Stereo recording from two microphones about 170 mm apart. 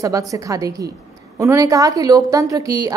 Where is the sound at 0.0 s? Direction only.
20° right (ahead or behind).